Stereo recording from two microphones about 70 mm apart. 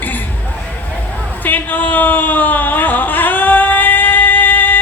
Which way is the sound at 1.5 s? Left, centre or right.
Left.